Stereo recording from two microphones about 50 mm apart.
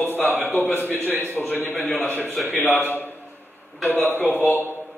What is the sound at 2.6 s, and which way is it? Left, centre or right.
Speech, left.